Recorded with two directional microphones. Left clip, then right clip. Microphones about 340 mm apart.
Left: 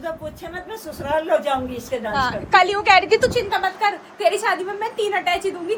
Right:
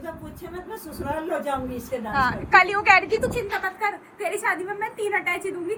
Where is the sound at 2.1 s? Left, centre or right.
Centre.